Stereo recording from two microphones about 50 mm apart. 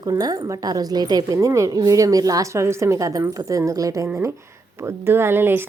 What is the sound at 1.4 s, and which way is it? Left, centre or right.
Speech, right.